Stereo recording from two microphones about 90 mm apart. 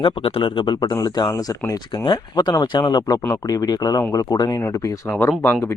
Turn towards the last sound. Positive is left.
turn(degrees=20)  # may be behind; listen again after turning